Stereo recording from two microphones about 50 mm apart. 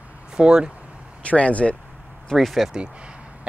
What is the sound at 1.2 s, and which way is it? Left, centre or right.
Speech, left.